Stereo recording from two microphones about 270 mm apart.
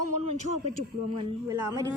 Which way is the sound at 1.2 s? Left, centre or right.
Centre.